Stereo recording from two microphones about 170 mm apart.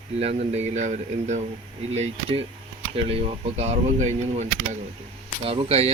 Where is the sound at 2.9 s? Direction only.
35° right (ahead or behind).